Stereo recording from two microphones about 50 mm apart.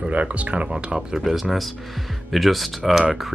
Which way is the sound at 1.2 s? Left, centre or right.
Centre.